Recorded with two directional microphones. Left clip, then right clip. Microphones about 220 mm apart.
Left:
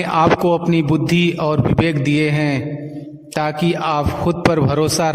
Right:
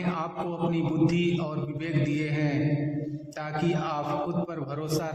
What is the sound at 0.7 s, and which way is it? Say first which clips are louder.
A man's voice: left 9 dB; 50° left (ahead or behind).